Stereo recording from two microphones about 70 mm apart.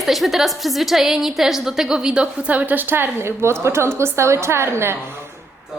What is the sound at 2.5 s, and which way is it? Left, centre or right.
A woman's voice, right.